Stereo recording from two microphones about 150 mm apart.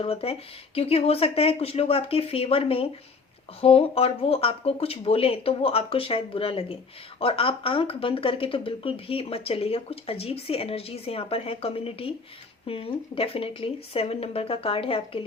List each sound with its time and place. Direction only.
0.0 s speech: 40° left (ahead or behind)